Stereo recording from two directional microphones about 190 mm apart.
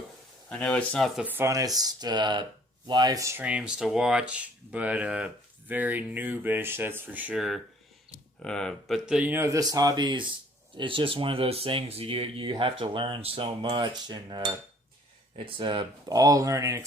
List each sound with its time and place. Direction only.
0.5 s speech: 5° left (ahead or behind); by 16.8 s 15° right (ahead or behind)